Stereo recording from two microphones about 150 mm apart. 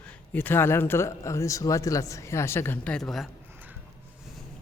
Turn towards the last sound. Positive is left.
turn(degrees=0)  # may be behind; listen again after turning